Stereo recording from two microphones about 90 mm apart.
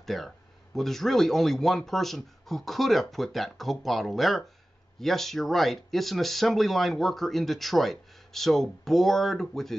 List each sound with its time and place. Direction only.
0.0 s speech: centre (ahead or behind)